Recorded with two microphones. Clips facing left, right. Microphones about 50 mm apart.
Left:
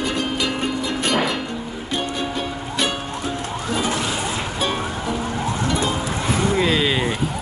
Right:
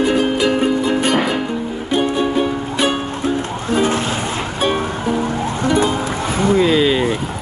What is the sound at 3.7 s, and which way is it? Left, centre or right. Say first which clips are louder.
Music: right 7 dB; right.